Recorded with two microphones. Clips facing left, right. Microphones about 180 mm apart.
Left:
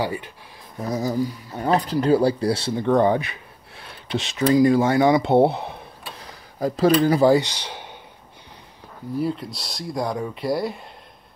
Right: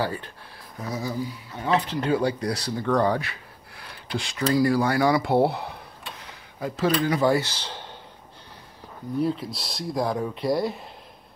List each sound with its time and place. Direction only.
0.0 s speech: 15° left (ahead or behind)
0.8 s speech: 40° left (ahead or behind); by 5.8 s 20° left (ahead or behind)
6.2 s speech: 35° left (ahead or behind)
7.3 s speech: 15° left (ahead or behind)
9.2 s speech: centre (ahead or behind)